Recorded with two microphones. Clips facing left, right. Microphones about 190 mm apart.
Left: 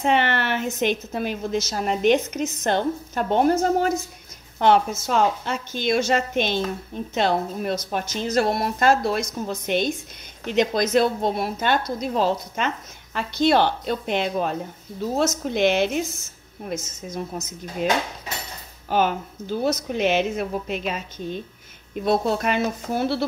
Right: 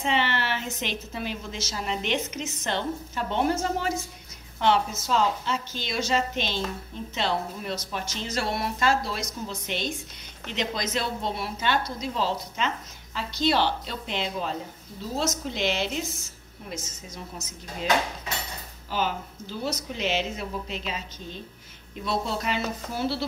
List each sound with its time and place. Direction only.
0.0 s a woman's voice: 55° left (ahead or behind)